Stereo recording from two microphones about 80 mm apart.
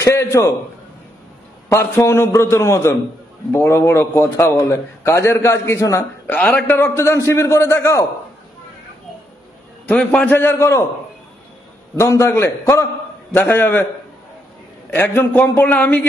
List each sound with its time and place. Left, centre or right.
0.0 s a man's voice: left
1.7 s a man's voice: left
6.3 s a man's voice: centre
6.8 s a man's voice: left
9.9 s a man's voice: centre
10.3 s a man's voice: left
12.0 s a man's voice: left
13.3 s a man's voice: left
14.9 s a man's voice: left